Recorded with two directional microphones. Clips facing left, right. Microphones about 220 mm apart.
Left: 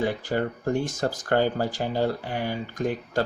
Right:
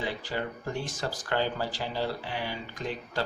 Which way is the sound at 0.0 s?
50° left (ahead or behind).